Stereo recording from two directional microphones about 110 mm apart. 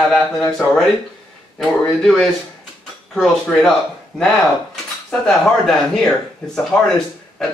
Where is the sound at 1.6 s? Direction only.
5° left (ahead or behind).